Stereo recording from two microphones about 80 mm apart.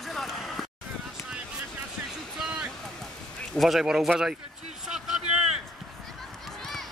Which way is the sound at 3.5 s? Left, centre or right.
Centre.